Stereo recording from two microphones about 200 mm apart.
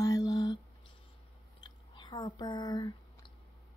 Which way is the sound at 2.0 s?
20° left (ahead or behind).